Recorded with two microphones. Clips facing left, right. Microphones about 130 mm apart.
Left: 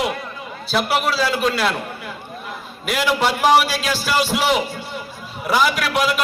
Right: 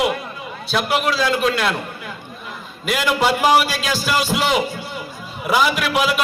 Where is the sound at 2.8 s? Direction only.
Centre (ahead or behind).